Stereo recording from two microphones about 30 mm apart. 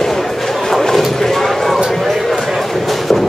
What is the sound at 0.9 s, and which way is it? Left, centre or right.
Clip-clop, centre.